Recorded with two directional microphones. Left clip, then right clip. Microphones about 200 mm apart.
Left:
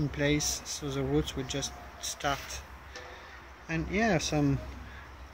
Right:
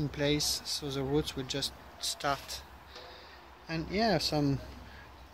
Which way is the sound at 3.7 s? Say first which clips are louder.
Left 1 dB; 10° right (ahead or behind).